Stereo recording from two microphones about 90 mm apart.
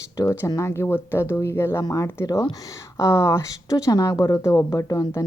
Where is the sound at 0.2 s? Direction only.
35° left (ahead or behind).